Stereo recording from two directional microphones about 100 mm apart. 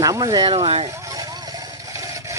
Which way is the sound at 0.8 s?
40° right (ahead or behind).